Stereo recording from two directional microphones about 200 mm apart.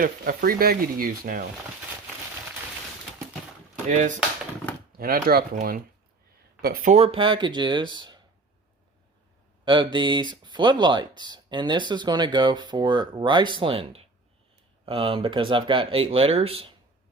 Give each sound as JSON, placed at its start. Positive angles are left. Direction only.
{"t": 0.0, "sound": "speech", "side_deg": -45}
{"t": 3.8, "sound": "speech", "side_deg": -35}
{"t": 4.9, "sound": "speech", "side_deg": -45}
{"t": 6.6, "sound": "speech", "side_deg": -50}
{"t": 6.9, "sound": "speech", "side_deg": -30}
{"t": 9.6, "sound": "speech", "side_deg": -25}